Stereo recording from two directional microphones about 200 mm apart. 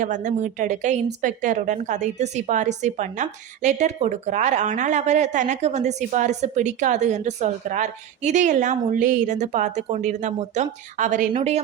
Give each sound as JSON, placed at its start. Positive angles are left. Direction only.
{"t": 0.0, "sound": "a woman's voice", "side_deg": -40}